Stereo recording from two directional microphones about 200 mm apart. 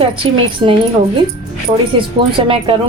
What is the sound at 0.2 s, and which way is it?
Speech, 25° right (ahead or behind).